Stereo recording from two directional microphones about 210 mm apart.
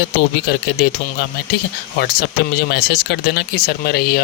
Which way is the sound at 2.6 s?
50° left (ahead or behind).